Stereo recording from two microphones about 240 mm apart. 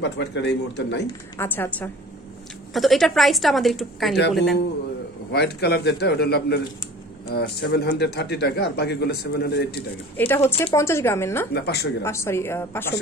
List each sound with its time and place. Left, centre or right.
0.0 s a man's voice: left
1.4 s a woman's voice: centre
5.3 s a man's voice: left
10.1 s speech: centre
11.5 s a man's voice: left
12.0 s speech: centre